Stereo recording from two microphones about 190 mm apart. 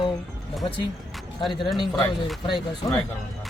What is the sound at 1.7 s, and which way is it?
Speech, 25° left (ahead or behind).